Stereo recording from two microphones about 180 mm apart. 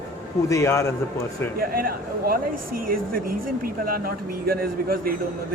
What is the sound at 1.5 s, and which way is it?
Speech, 55° right (ahead or behind).